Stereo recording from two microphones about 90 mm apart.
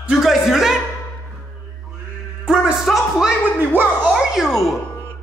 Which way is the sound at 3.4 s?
20° right (ahead or behind).